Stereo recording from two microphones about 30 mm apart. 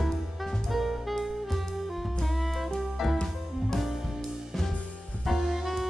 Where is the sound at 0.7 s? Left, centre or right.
Centre.